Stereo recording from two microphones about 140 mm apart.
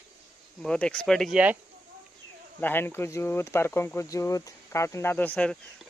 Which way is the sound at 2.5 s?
15° left (ahead or behind).